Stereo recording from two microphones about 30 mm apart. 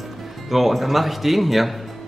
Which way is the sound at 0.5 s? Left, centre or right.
Centre.